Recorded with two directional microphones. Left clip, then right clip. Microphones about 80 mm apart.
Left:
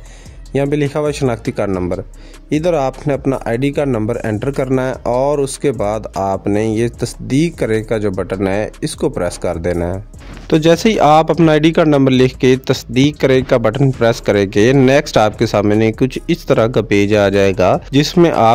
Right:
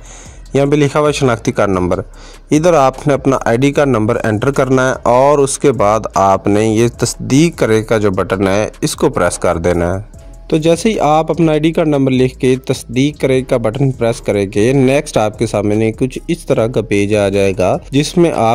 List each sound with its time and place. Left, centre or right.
0.5 s speech: centre